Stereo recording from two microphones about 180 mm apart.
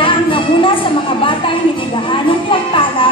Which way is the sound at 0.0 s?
30° left (ahead or behind).